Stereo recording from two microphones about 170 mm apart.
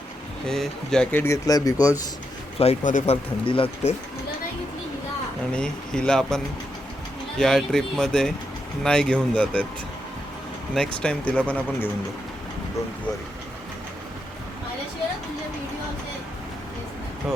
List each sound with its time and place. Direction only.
0.4 s speech: centre (ahead or behind); by 2.0 s 20° left (ahead or behind)
2.6 s speech: 40° left (ahead or behind)
3.4 s speech: 30° left (ahead or behind)
5.5 s speech: 5° left (ahead or behind)
10.8 s speech: 5° left (ahead or behind)